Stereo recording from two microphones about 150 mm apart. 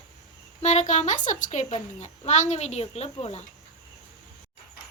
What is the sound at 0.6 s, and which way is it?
A woman's voice, 50° left (ahead or behind).